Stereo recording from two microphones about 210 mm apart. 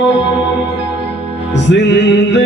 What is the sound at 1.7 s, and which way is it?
Music, 55° left (ahead or behind).